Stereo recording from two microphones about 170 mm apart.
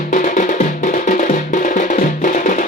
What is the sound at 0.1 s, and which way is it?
Music, 50° left (ahead or behind).